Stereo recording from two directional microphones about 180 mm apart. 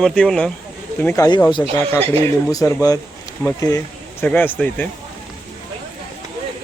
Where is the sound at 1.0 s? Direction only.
15° left (ahead or behind).